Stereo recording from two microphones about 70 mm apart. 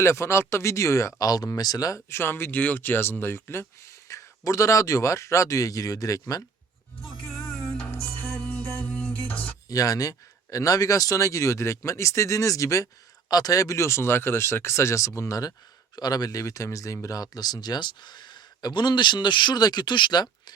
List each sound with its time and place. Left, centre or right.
0.0 s speech: left
7.9 s music: left
9.6 s speech: left
16.4 s speech: left